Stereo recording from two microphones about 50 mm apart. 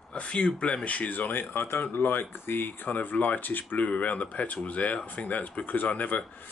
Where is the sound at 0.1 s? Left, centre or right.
Left.